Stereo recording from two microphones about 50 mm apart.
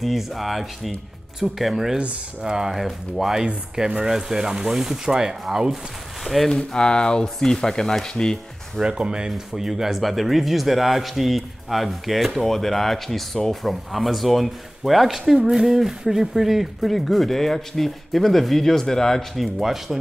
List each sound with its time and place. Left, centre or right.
0.0 s a man's voice: centre
2.0 s speech: centre
2.7 s a man's voice: centre
3.4 s speech: centre
6.5 s speech: centre
8.8 s speech: centre
9.5 s a man's voice: centre
19.3 s a man's voice: centre